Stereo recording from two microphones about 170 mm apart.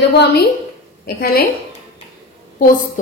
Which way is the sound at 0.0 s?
80° left.